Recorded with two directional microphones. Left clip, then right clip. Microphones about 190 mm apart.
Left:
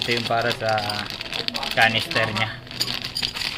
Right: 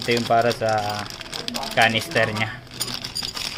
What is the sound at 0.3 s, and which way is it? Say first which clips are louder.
Speech: right 5 dB; 30° right (ahead or behind).